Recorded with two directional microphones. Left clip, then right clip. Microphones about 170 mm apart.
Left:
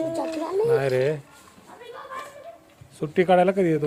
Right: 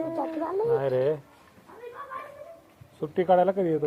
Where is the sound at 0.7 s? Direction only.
85° left; by 1.2 s 65° left (ahead or behind).